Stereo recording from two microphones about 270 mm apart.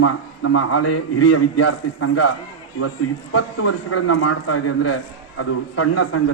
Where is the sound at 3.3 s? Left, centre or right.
Left.